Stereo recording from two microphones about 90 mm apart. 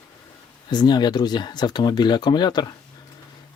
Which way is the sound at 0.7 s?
50° left (ahead or behind).